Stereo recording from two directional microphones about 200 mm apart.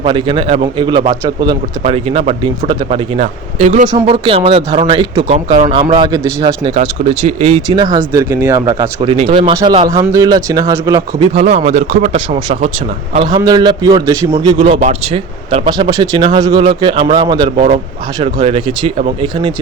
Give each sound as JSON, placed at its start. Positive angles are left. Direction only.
{"t": 0.0, "sound": "speech", "side_deg": -25}
{"t": 3.2, "sound": "speech", "side_deg": -40}
{"t": 3.9, "sound": "speech", "side_deg": -25}
{"t": 6.7, "sound": "speech", "side_deg": -35}
{"t": 9.0, "sound": "speech", "side_deg": -30}
{"t": 11.3, "sound": "speech", "side_deg": -35}